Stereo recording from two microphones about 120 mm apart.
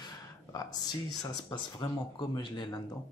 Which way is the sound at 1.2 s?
35° left (ahead or behind).